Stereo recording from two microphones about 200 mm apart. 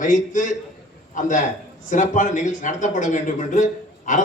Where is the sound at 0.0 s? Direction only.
40° left (ahead or behind).